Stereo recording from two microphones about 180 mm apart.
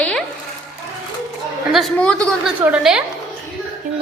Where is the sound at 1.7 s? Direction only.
5° left (ahead or behind).